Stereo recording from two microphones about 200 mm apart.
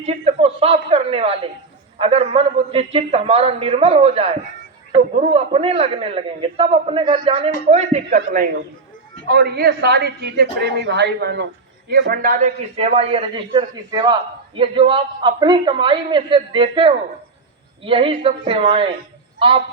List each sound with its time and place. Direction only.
0.0 s a man's voice: 30° right (ahead or behind)
8.1 s a man's voice: 45° right (ahead or behind)
12.7 s a man's voice: 30° right (ahead or behind)